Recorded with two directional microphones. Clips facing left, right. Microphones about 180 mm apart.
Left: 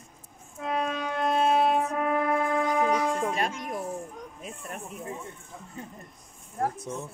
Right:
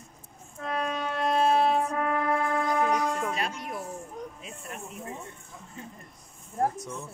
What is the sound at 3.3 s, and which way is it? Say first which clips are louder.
Music: left 3 dB; 45° left (ahead or behind).